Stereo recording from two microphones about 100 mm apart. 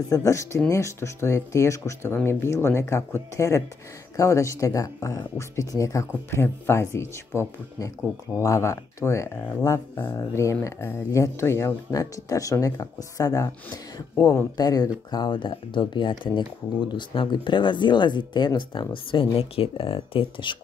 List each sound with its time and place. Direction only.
0.1 s speech: 30° left (ahead or behind)
14.1 s speech: 20° left (ahead or behind)
14.6 s speech: 40° left (ahead or behind); by 20.5 s 60° left (ahead or behind)